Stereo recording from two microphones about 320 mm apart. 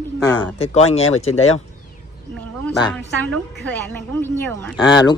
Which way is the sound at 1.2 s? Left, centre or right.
Left.